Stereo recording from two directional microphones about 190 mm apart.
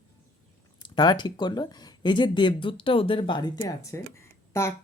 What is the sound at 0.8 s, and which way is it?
Speech, 20° left (ahead or behind).